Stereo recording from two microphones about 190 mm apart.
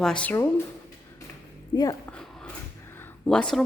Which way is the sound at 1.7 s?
20° left (ahead or behind).